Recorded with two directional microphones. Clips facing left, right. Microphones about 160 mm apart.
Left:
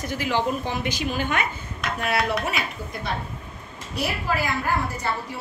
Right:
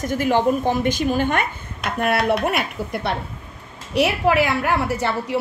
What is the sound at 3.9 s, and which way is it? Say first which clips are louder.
A woman's voice: right 9 dB; 75° right (ahead or behind).